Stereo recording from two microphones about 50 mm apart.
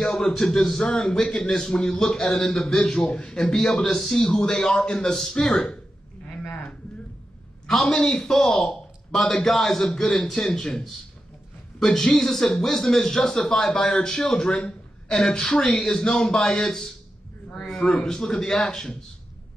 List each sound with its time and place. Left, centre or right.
0.0 s a man's voice: centre
3.6 s speech: centre
7.6 s a man's voice: centre
18.0 s speech: centre